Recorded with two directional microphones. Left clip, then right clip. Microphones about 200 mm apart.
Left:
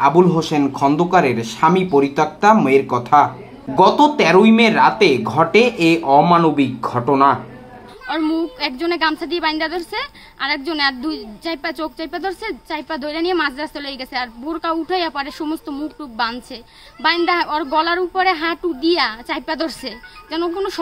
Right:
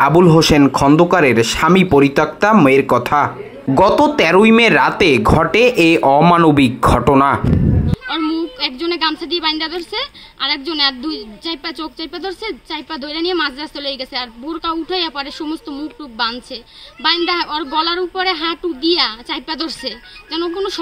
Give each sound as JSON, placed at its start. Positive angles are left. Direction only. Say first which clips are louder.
{"t": 0.0, "sound": "speech", "louder": "right 3 dB", "side_deg": -35}
{"t": 8.1, "sound": "a woman's voice", "louder": "even", "side_deg": 10}